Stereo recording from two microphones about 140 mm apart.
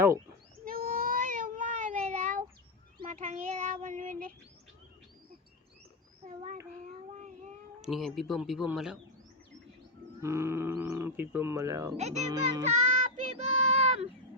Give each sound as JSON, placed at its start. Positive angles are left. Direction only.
{"t": 0.6, "sound": "cat", "side_deg": -90}
{"t": 3.0, "sound": "child singing", "side_deg": -60}
{"t": 6.2, "sound": "child singing", "side_deg": -60}
{"t": 7.8, "sound": "speech", "side_deg": 0}
{"t": 10.2, "sound": "speech", "side_deg": -20}
{"t": 11.9, "sound": "speech", "side_deg": -55}
{"t": 12.6, "sound": "child singing", "side_deg": -55}